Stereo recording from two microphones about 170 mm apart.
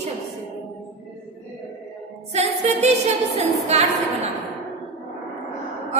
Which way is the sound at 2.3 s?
40° right (ahead or behind).